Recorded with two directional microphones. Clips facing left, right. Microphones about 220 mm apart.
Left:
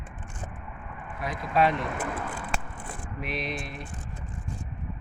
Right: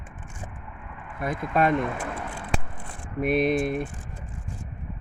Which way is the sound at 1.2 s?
50° right (ahead or behind).